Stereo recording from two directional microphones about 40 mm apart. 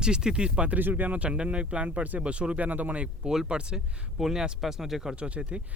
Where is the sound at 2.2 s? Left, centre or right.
Right.